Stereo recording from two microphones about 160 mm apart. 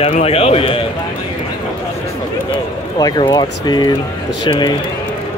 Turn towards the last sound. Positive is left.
turn(degrees=30)  # may be behind; listen again after turning